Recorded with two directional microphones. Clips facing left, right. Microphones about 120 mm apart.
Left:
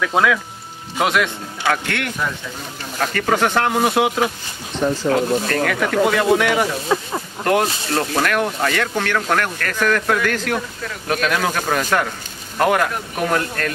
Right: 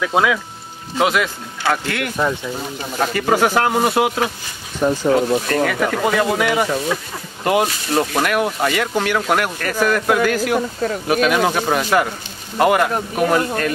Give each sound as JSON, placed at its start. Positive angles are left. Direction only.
{"t": 0.0, "sound": "speech", "side_deg": -5}
{"t": 6.9, "sound": "speech", "side_deg": 30}
{"t": 7.4, "sound": "speech", "side_deg": -5}